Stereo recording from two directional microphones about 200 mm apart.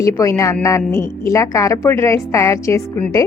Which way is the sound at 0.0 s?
15° left (ahead or behind).